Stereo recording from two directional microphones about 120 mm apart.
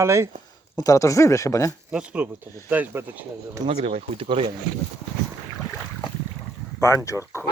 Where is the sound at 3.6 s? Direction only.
55° right (ahead or behind).